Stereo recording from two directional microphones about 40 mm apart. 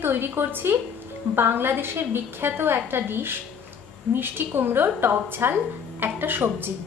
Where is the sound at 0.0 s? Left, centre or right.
Right.